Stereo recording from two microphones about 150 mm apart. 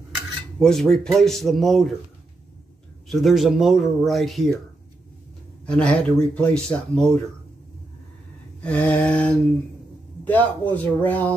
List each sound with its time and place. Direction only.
0.6 s speech: 5° left (ahead or behind)
3.1 s speech: centre (ahead or behind)
5.7 s speech: 5° left (ahead or behind)
8.6 s speech: 10° left (ahead or behind)